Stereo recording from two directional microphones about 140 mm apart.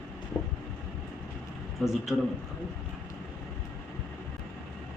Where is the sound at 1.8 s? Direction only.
Centre (ahead or behind).